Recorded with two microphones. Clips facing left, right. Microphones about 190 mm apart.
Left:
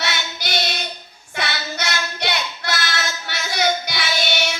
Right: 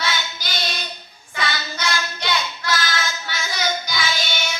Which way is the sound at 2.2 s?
60° left (ahead or behind).